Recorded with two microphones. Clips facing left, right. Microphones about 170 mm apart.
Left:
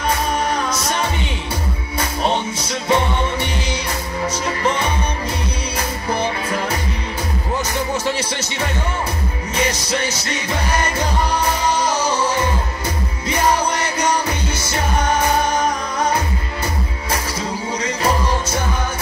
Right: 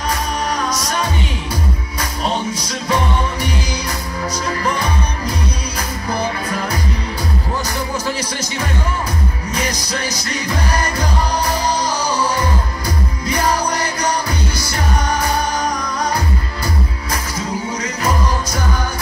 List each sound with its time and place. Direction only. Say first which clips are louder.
0.5 s music: even; 25° left (ahead or behind)
17.8 s music: left 2 dB; 30° left (ahead or behind)